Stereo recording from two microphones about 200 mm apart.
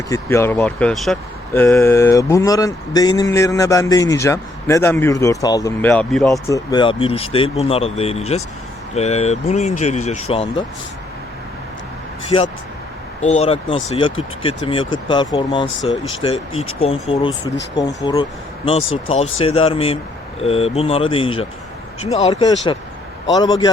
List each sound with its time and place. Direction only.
0.1 s speech: 15° left (ahead or behind)
6.5 s speech: 20° left (ahead or behind)
12.3 s speech: 20° left (ahead or behind)
13.2 s speech: 35° left (ahead or behind)